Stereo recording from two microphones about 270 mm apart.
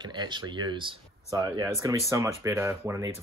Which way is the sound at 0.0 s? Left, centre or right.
Centre.